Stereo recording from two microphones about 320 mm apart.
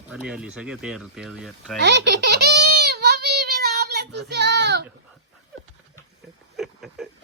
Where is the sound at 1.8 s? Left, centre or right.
Right.